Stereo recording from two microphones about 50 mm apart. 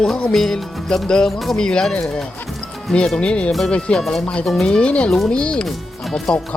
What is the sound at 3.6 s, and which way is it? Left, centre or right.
Music, centre.